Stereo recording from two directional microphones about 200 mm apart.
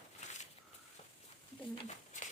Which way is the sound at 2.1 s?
40° left (ahead or behind).